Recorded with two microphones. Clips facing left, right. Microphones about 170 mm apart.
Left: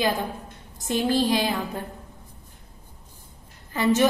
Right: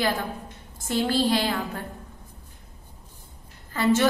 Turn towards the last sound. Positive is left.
turn(degrees=20)  # may be behind; listen again after turning